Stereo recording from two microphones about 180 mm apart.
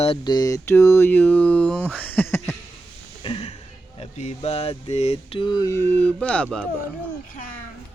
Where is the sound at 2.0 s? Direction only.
10° left (ahead or behind).